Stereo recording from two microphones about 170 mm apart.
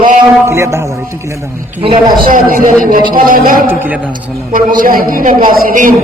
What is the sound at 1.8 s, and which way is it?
Speech, 30° right (ahead or behind).